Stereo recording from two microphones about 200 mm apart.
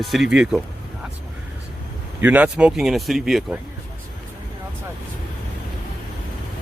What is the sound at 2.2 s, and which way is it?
Speech, 10° right (ahead or behind).